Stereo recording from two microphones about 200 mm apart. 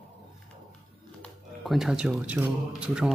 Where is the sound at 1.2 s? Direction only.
Centre (ahead or behind).